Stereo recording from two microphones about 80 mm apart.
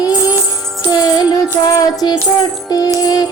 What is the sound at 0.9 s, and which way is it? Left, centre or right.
Music, left.